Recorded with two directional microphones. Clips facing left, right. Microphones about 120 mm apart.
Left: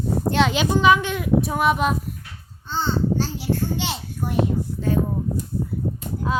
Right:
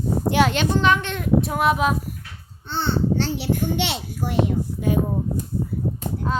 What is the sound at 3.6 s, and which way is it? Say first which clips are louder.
Speech: right 2 dB; 80° right.